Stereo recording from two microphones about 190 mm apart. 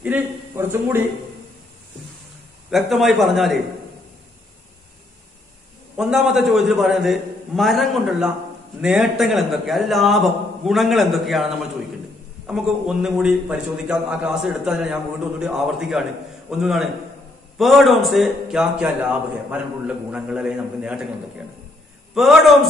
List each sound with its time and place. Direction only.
0.0 s a man's voice: 10° right (ahead or behind)
2.7 s a man's voice: centre (ahead or behind)
5.9 s a man's voice: 5° right (ahead or behind)
22.1 s a man's voice: centre (ahead or behind)